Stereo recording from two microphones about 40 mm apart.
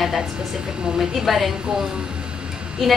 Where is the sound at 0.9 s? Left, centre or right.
Centre.